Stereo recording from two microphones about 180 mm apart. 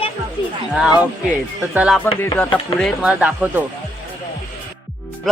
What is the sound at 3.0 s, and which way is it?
Speech, 5° right (ahead or behind).